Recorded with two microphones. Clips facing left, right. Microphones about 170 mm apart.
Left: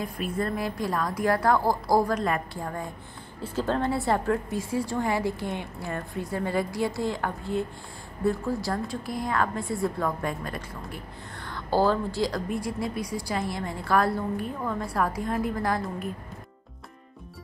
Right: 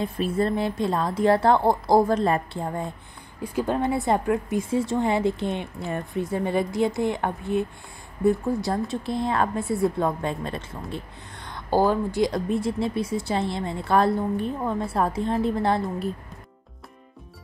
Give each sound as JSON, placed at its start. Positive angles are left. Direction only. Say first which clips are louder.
{"t": 0.0, "sound": "speech", "louder": "right 5 dB", "side_deg": -25}